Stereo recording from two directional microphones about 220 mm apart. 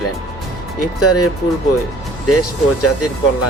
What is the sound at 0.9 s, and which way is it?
Speech, 90° left.